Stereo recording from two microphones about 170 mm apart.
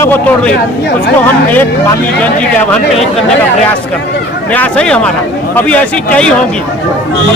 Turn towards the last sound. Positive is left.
turn(degrees=10)  # may be behind; listen again after turning